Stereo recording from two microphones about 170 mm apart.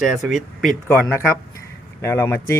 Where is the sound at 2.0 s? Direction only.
15° left (ahead or behind).